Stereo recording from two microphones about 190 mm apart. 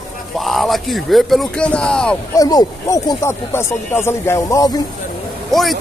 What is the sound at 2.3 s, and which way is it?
Speech, 20° left (ahead or behind).